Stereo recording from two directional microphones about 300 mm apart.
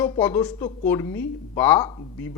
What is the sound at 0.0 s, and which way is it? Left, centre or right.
Speech, centre.